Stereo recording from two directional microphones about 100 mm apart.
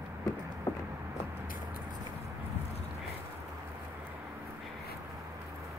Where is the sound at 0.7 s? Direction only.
25° left (ahead or behind).